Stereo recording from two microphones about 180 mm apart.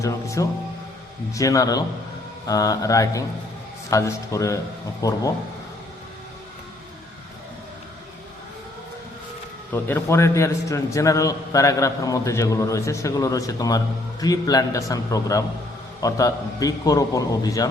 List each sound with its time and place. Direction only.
0.0 s music: 15° left (ahead or behind)
1.3 s a man's voice: 20° left (ahead or behind)
9.7 s a man's voice: 15° left (ahead or behind)